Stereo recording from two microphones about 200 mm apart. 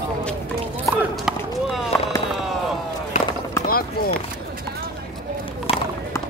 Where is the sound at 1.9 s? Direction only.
10° left (ahead or behind).